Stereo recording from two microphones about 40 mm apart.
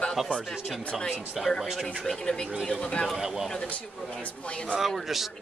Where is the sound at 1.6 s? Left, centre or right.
Centre.